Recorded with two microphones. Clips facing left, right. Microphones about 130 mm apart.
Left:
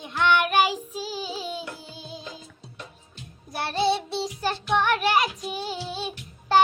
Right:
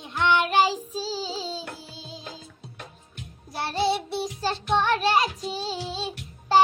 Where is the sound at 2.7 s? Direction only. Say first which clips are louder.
Left 1 dB; 55° right (ahead or behind).